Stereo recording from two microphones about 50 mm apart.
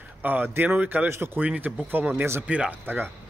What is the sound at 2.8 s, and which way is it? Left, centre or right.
Speech, right.